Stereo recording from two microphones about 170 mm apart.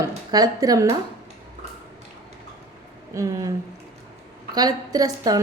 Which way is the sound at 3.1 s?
20° right (ahead or behind).